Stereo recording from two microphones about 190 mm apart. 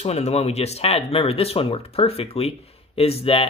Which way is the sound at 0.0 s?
35° left (ahead or behind).